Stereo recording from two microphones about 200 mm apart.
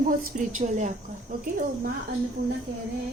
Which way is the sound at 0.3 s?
40° right (ahead or behind).